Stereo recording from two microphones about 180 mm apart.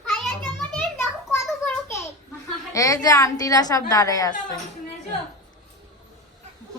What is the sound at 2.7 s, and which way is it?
A woman's voice, 20° left (ahead or behind).